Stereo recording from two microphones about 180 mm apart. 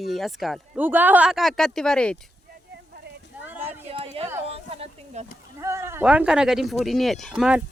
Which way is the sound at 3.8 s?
35° right (ahead or behind).